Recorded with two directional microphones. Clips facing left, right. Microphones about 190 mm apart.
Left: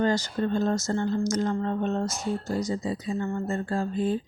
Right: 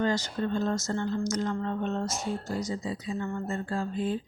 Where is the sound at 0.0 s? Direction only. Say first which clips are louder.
Left 3 dB; 40° left (ahead or behind).